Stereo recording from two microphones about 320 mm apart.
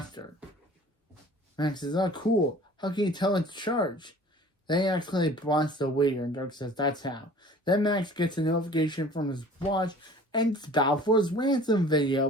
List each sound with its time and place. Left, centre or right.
0.2 s speech: centre
1.5 s speech: centre